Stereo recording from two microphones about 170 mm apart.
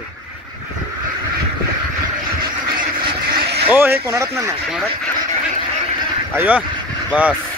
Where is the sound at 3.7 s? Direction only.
15° right (ahead or behind).